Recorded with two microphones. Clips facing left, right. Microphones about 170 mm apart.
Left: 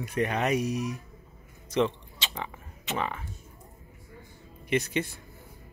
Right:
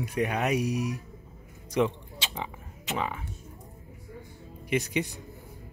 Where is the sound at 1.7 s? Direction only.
10° right (ahead or behind).